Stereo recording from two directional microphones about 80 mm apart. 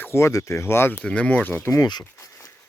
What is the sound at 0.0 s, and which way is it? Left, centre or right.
Speech, left.